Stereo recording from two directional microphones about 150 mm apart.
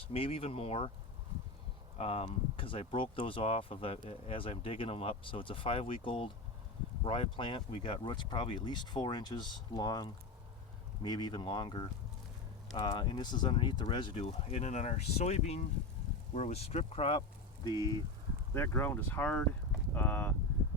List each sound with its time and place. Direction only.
0.1 s speech: 40° left (ahead or behind)
2.0 s speech: 45° left (ahead or behind); by 17.9 s 25° left (ahead or behind)
18.5 s speech: 15° left (ahead or behind)